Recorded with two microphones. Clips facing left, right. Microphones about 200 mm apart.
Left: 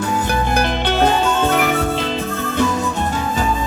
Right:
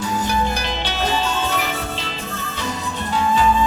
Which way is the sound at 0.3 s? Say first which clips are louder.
Left 4 dB; 55° left (ahead or behind).